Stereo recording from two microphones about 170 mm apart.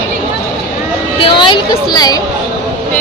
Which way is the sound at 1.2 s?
30° left (ahead or behind).